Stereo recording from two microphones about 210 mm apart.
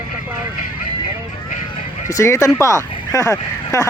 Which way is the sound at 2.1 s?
15° left (ahead or behind).